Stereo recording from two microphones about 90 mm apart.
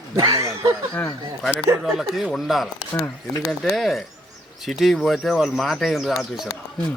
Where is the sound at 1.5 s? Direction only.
5° right (ahead or behind).